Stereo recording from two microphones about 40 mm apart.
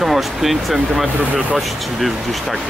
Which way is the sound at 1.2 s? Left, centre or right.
Right.